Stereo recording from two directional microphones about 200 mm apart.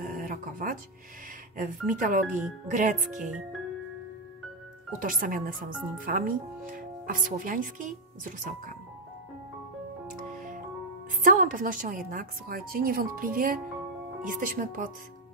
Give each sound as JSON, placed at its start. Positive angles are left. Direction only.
{"t": 0.0, "sound": "music", "side_deg": -45}
{"t": 1.6, "sound": "speech", "side_deg": -40}
{"t": 4.9, "sound": "a woman's voice", "side_deg": -45}
{"t": 10.3, "sound": "music", "side_deg": -40}
{"t": 11.2, "sound": "a woman's voice", "side_deg": -40}